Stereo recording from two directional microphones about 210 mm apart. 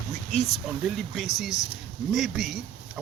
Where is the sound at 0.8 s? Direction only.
Centre (ahead or behind).